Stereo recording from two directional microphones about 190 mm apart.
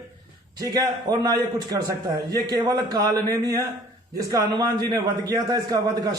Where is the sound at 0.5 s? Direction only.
20° right (ahead or behind).